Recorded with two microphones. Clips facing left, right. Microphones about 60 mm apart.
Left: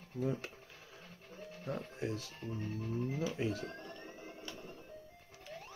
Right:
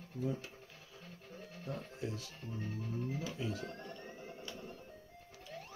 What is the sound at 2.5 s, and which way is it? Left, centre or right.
Music, centre.